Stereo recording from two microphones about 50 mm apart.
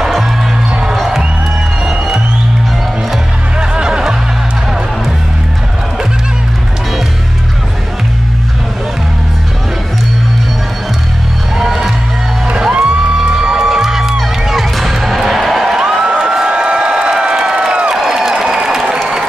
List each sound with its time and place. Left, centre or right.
0.7 s music: centre
0.9 s music: centre
3.5 s music: centre
11.5 s music: centre
12.7 s music: centre
17.9 s a sound: centre